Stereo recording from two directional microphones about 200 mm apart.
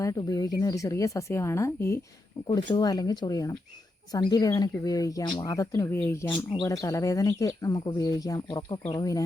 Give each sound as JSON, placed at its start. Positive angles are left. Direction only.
{"t": 0.0, "sound": "speech", "side_deg": 15}